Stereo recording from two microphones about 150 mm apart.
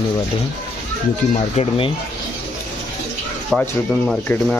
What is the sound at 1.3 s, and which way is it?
Speech, 45° left (ahead or behind).